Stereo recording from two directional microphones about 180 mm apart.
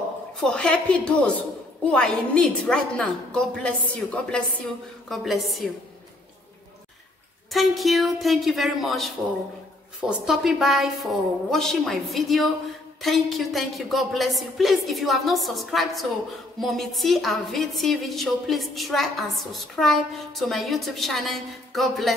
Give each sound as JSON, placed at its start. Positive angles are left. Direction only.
{"t": 0.4, "sound": "a woman's voice", "side_deg": 5}
{"t": 7.5, "sound": "a woman's voice", "side_deg": 0}